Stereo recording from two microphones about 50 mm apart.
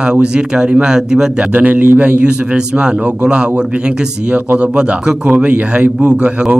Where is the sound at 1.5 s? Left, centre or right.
Right.